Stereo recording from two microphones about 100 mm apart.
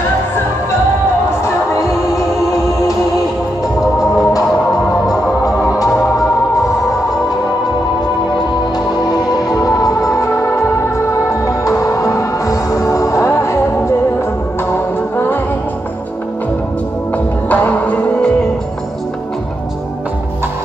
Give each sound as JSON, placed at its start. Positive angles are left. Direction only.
{"t": 1.4, "sound": "music", "side_deg": 30}
{"t": 4.2, "sound": "music", "side_deg": 35}
{"t": 9.3, "sound": "music", "side_deg": 40}
{"t": 17.5, "sound": "music", "side_deg": 15}